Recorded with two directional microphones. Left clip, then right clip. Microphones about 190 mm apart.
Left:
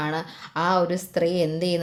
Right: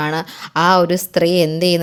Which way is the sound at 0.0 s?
35° right (ahead or behind).